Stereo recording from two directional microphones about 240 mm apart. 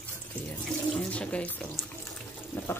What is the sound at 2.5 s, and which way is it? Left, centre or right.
Water, centre.